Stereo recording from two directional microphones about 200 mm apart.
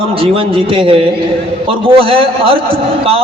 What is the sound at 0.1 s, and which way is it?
A man's voice, 25° right (ahead or behind).